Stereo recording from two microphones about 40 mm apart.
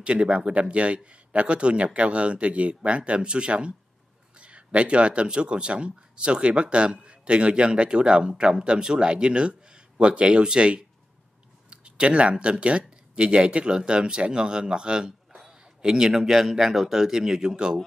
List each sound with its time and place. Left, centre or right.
0.0 s speech: right